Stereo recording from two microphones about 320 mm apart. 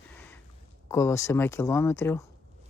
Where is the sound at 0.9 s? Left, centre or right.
Centre.